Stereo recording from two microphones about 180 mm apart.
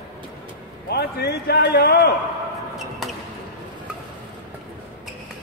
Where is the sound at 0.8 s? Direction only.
60° left (ahead or behind).